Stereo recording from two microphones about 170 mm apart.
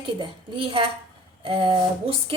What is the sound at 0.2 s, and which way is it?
A woman's voice, 30° right (ahead or behind).